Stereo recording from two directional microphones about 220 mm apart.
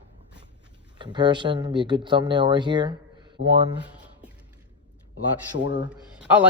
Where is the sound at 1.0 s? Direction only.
20° right (ahead or behind).